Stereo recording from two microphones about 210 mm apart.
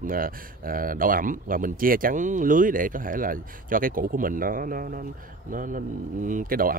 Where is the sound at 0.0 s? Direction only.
40° right (ahead or behind).